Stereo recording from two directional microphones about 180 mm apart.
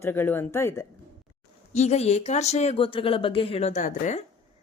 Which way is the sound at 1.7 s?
40° left (ahead or behind).